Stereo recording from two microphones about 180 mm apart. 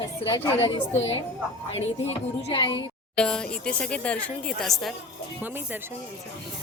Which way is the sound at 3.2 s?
5° left (ahead or behind).